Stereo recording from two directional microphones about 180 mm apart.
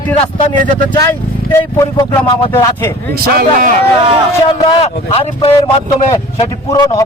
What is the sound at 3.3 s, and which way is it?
Speech, 50° right (ahead or behind).